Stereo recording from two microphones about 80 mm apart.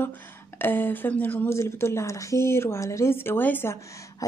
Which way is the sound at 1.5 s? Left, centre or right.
Left.